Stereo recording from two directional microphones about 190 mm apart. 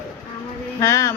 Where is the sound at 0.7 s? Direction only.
15° left (ahead or behind).